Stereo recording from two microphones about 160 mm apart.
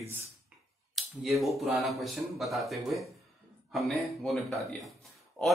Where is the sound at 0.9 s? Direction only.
Centre (ahead or behind).